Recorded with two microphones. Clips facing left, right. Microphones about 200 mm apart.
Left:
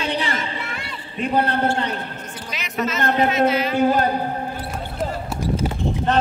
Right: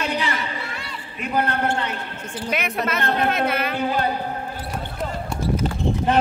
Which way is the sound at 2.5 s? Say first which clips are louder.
Even; 60° right (ahead or behind).